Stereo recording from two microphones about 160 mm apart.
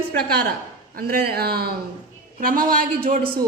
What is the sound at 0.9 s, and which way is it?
Speech, 70° right (ahead or behind).